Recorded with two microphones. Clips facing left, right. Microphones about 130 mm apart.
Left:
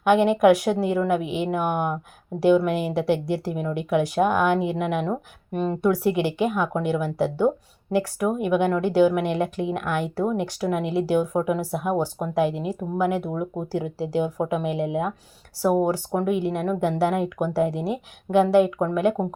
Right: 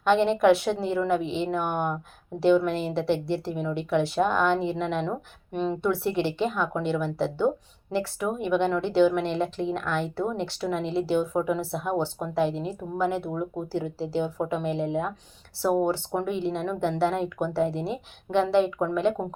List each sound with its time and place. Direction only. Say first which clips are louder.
0.0 s a woman's voice: left 3 dB; 10° left (ahead or behind)